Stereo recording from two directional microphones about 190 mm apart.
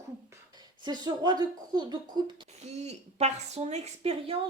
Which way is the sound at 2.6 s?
35° right (ahead or behind).